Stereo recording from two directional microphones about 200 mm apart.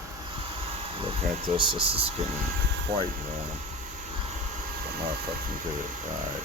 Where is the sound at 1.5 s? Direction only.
25° right (ahead or behind).